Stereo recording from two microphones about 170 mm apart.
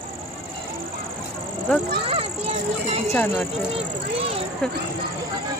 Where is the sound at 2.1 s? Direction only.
35° right (ahead or behind).